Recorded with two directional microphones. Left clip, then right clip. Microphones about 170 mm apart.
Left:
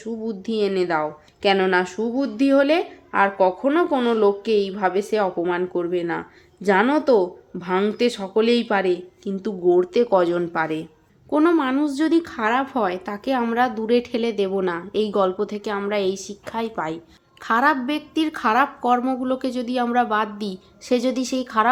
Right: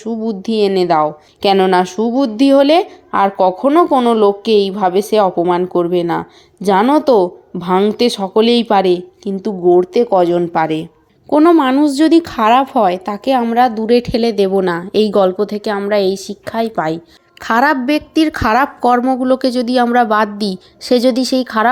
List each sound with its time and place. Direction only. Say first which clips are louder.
0.0 s a woman's voice: right 8 dB; 30° right (ahead or behind)
9.3 s a woman's voice: right 7 dB; 15° right (ahead or behind); by 21.7 s 40° right (ahead or behind)